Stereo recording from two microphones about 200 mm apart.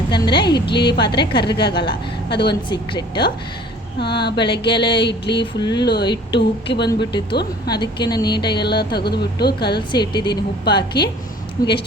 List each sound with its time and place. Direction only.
0.1 s a woman's voice: 25° left (ahead or behind)
0.5 s a woman's voice: 55° left (ahead or behind)
1.1 s speech: 25° left (ahead or behind)
1.6 s a woman's voice: 55° left (ahead or behind)
2.6 s speech: 25° left (ahead or behind)
4.2 s a woman's voice: 55° left (ahead or behind)
4.6 s speech: 25° left (ahead or behind)
4.9 s a woman's voice: 60° left (ahead or behind)
5.4 s speech: 20° left (ahead or behind)
5.8 s a woman's voice: 55° left (ahead or behind)
7.7 s speech: 20° left (ahead or behind)
8.6 s speech: 55° left (ahead or behind)
9.7 s speech: 25° left (ahead or behind)
11.6 s speech: 50° left (ahead or behind)